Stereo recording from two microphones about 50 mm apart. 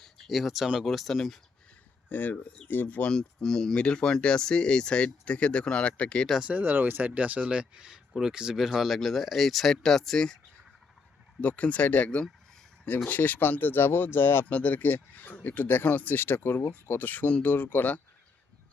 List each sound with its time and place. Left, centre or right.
0.0 s a sound: centre
0.9 s speech: centre
2.0 s speech: left
3.1 s speech: centre
6.5 s speech: right
7.1 s speech: right; by 10.3 s centre
11.3 s speech: left
14.4 s speech: left